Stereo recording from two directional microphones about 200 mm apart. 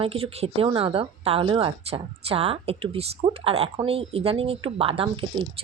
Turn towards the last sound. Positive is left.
turn(degrees=-30)  # may be behind; listen again after turning